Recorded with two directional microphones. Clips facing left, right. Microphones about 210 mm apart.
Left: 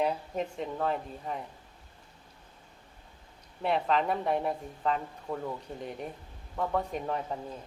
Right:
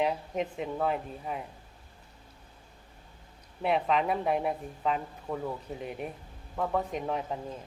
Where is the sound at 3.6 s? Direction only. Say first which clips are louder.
Right 1 dB; 5° right (ahead or behind).